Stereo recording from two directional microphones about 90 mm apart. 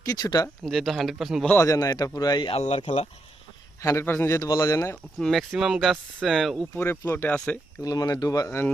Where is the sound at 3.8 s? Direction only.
30° left (ahead or behind).